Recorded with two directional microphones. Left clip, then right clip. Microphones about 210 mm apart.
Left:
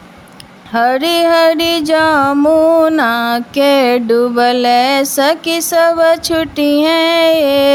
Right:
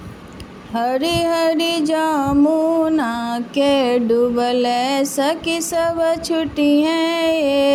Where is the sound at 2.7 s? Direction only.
25° left (ahead or behind).